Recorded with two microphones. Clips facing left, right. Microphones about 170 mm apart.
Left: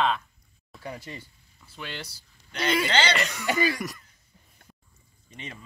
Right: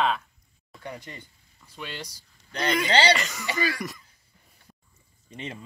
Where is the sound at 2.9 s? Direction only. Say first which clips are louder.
Right 4 dB; 35° right (ahead or behind).